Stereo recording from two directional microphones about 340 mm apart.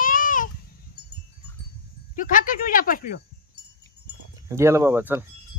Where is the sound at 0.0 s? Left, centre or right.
Left.